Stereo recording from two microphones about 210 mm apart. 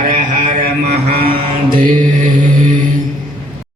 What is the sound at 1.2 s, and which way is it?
Mantra, 25° right (ahead or behind).